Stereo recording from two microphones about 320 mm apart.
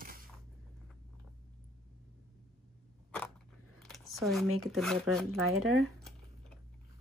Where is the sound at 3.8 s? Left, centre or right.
Centre.